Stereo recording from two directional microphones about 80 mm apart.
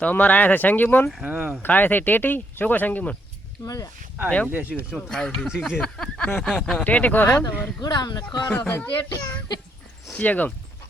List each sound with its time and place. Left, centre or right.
0.0 s speech: centre
1.4 s speech: centre
1.6 s speech: left
3.6 s speech: left
4.4 s speech: right
5.0 s speech: centre
5.8 s a sound: centre
6.4 s speech: centre
6.8 s speech: centre
7.8 s speech: left
8.4 s speech: left